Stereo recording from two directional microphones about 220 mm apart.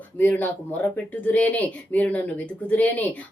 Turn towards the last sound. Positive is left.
turn(degrees=5)  # may be behind; listen again after turning